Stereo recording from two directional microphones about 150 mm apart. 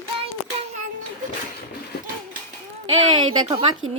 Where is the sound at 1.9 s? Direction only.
90° left.